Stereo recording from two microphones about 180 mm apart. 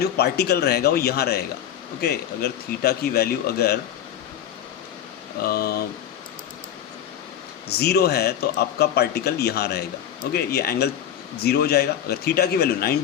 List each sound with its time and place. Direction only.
0.0 s speech: 65° left (ahead or behind)
5.4 s speech: 55° left (ahead or behind)
7.7 s speech: 60° left (ahead or behind)